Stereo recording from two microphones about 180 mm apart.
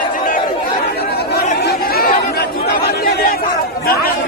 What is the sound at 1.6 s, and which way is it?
Chatter, 55° left (ahead or behind).